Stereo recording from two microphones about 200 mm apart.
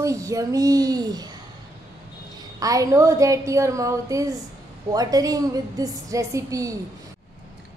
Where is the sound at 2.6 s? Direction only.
15° right (ahead or behind).